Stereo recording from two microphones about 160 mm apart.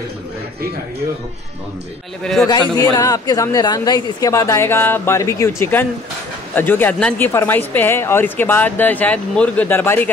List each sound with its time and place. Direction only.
2.8 s speech: 20° left (ahead or behind)